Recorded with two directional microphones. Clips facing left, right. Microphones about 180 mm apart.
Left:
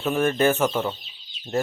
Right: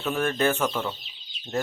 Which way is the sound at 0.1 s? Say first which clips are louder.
Left 4 dB; 15° left (ahead or behind).